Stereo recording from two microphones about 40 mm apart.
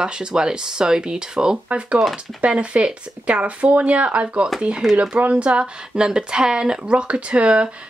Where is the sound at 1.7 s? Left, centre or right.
Right.